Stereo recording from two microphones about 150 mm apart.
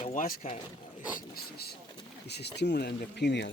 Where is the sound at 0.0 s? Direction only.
60° left (ahead or behind).